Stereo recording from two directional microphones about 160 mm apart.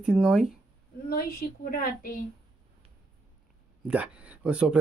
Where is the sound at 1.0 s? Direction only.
70° left (ahead or behind).